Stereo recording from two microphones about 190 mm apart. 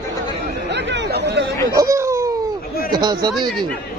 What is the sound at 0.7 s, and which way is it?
Chatter, 65° right (ahead or behind).